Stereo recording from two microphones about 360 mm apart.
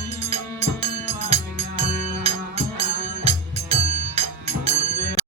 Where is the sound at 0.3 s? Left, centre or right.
Centre.